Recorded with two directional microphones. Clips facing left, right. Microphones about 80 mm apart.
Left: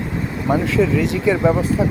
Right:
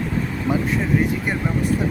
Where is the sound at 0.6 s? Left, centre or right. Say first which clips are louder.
Left 3 dB; left.